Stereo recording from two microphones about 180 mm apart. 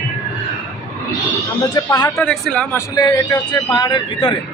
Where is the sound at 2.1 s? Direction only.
5° left (ahead or behind).